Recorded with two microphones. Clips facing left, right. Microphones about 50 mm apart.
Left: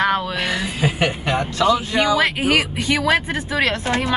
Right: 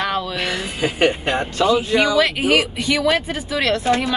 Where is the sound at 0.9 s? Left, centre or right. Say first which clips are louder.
Right 3 dB; right.